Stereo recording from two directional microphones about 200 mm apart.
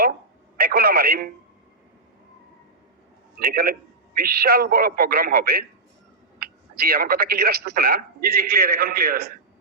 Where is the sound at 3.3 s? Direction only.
50° right (ahead or behind).